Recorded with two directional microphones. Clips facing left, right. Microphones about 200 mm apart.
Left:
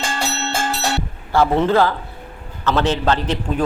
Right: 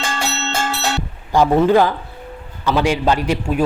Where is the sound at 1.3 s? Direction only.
15° right (ahead or behind).